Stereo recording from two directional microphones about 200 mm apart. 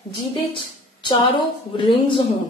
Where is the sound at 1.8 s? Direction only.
25° left (ahead or behind).